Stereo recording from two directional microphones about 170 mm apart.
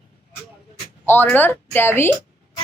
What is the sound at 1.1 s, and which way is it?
Speech, 10° left (ahead or behind).